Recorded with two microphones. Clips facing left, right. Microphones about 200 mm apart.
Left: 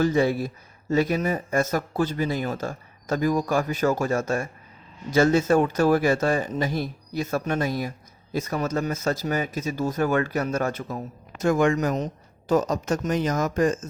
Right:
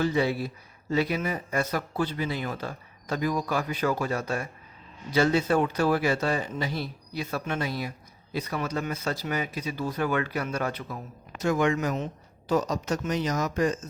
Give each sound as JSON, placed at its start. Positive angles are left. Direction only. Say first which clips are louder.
{"t": 0.0, "sound": "speech", "louder": "left 4 dB", "side_deg": 45}